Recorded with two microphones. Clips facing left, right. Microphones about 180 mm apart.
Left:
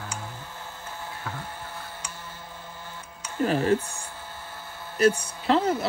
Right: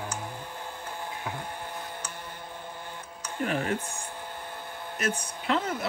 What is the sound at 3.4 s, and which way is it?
Music, 35° left (ahead or behind).